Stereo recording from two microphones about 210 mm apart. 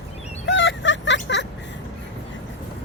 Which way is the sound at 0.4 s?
60° left (ahead or behind).